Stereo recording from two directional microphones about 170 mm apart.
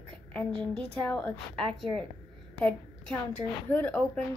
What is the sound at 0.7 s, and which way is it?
A woman's voice, 5° left (ahead or behind).